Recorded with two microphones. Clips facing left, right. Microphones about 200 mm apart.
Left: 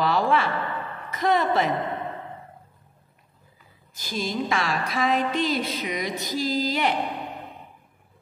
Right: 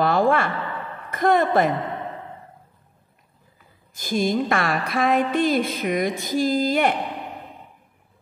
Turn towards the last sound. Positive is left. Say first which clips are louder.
# right 5 dB
turn(degrees=-50)  # may be behind; listen again after turning